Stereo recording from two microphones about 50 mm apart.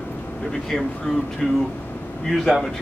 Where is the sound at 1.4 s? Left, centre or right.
Centre.